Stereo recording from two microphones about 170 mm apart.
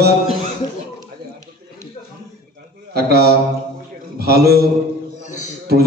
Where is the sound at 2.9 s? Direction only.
65° right (ahead or behind).